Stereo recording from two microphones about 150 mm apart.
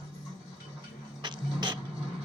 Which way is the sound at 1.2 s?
30° right (ahead or behind).